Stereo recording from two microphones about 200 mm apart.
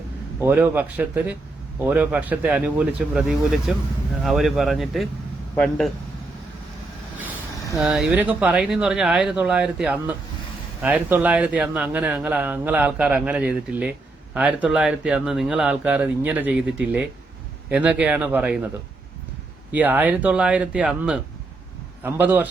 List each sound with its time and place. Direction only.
0.3 s speech: 10° right (ahead or behind)
7.8 s speech: 5° right (ahead or behind)
19.7 s speech: 10° right (ahead or behind)